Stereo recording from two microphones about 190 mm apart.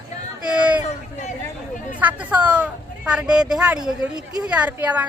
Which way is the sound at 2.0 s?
10° right (ahead or behind).